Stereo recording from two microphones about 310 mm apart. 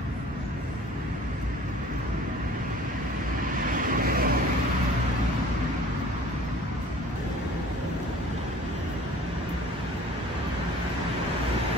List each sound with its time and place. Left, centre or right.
3.5 s vehicle: right